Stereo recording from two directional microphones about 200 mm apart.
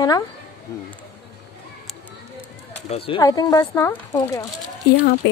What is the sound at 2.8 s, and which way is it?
Speech, 30° left (ahead or behind).